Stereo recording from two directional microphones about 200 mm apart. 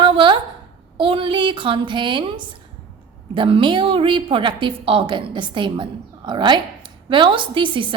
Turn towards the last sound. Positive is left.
turn(degrees=-25)  # may be behind; listen again after turning